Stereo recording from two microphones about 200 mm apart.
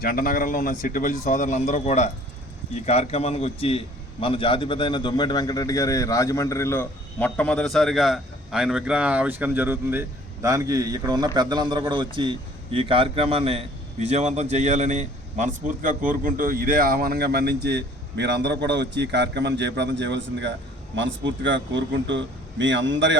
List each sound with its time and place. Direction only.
0.0 s a man's voice: 45° left (ahead or behind); by 23.1 s 65° right (ahead or behind)